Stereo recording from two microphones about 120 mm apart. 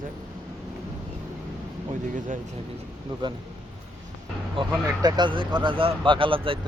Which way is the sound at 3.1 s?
45° right (ahead or behind).